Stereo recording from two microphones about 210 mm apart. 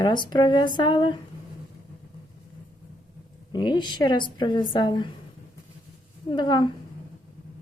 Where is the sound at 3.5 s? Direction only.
20° left (ahead or behind).